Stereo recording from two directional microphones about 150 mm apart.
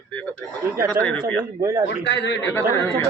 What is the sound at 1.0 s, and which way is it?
Speech, 15° right (ahead or behind).